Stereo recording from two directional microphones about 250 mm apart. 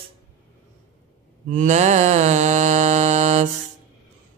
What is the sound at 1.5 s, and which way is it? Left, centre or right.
Mantra, right.